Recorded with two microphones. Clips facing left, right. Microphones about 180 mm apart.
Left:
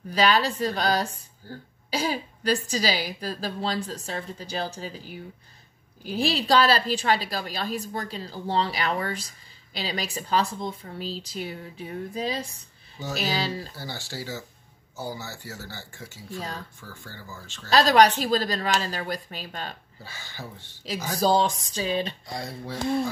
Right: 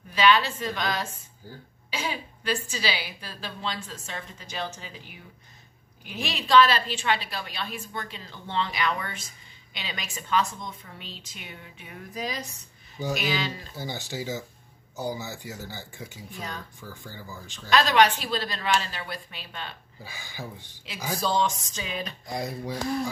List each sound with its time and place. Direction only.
0.1 s a woman's voice: 40° left (ahead or behind)
13.7 s speech: 20° right (ahead or behind)
16.3 s a woman's voice: 35° left (ahead or behind)
16.8 s speech: 15° right (ahead or behind)
17.6 s a woman's voice: 35° left (ahead or behind)
20.0 s speech: 15° right (ahead or behind)
21.2 s a woman's voice: 35° left (ahead or behind)
22.3 s speech: 20° right (ahead or behind)